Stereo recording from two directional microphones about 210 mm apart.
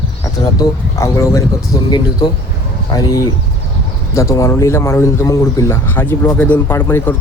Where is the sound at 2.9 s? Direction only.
15° left (ahead or behind).